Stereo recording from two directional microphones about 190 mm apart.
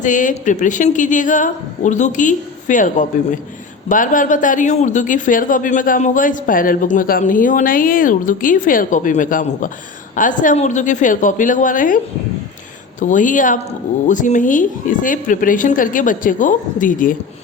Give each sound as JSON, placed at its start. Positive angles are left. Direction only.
{"t": 0.0, "sound": "a woman's voice", "side_deg": 40}
{"t": 13.0, "sound": "speech", "side_deg": 40}